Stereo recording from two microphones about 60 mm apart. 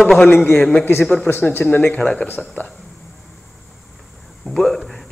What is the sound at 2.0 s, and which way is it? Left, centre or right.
Speech, centre.